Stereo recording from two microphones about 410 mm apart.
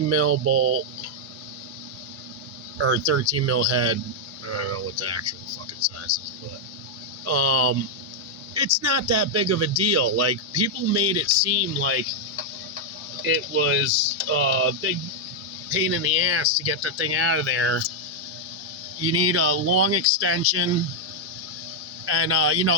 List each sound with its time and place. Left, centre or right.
0.1 s speech: right
2.7 s speech: right
7.3 s speech: right
8.8 s speech: right
13.2 s speech: right
19.0 s speech: right
22.0 s speech: right